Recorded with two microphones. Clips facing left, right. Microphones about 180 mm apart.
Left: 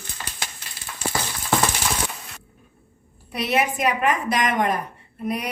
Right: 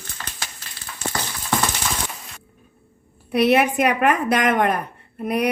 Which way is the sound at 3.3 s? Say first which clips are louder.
Right 6 dB; 60° right (ahead or behind).